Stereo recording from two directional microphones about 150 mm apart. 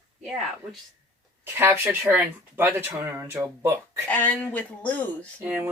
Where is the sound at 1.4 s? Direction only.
15° right (ahead or behind).